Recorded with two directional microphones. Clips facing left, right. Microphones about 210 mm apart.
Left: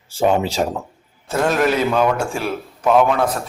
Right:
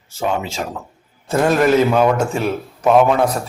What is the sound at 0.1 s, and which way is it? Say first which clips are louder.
Speech: left 4 dB; 35° left (ahead or behind).